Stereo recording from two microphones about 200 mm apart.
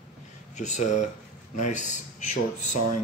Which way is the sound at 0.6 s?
35° left (ahead or behind).